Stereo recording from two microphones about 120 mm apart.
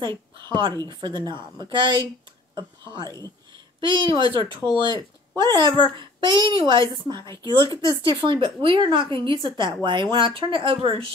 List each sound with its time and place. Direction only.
0.0 s a child's voice: 40° right (ahead or behind)
7.6 s speech: 30° left (ahead or behind)
8.0 s a woman's voice: 45° right (ahead or behind)